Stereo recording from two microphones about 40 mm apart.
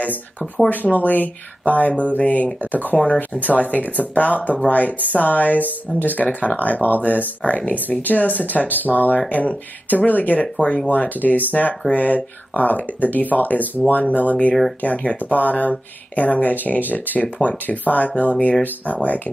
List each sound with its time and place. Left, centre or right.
0.8 s speech: left
10.4 s speech: left
10.9 s speech: left